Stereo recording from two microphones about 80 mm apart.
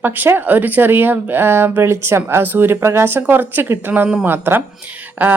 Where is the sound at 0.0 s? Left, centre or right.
Right.